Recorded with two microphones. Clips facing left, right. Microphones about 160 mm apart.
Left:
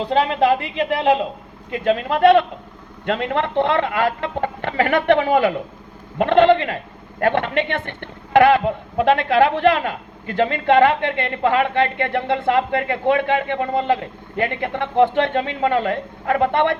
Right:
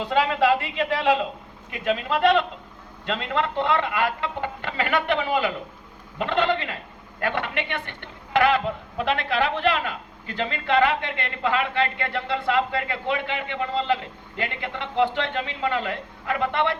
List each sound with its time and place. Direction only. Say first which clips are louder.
0.0 s a woman's voice: left 4 dB; 30° left (ahead or behind)
1.8 s a man's voice: left 6 dB; 45° left (ahead or behind)